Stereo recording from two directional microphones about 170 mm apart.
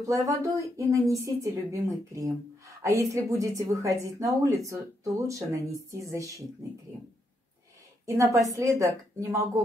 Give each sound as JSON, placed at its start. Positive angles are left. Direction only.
{"t": 0.0, "sound": "a woman's voice", "side_deg": -20}
{"t": 8.0, "sound": "a woman's voice", "side_deg": -20}